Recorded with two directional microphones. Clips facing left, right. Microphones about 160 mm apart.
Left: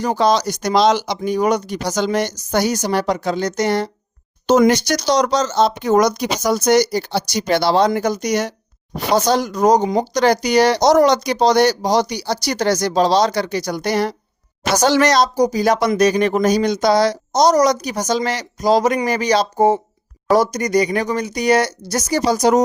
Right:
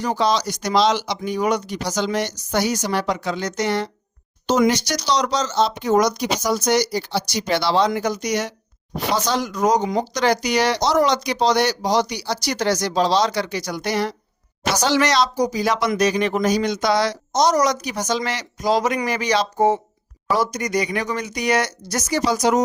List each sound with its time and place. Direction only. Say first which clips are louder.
0.0 s speech: left 4 dB; 45° left (ahead or behind)
4.4 s speech: left 5 dB; 50° left (ahead or behind)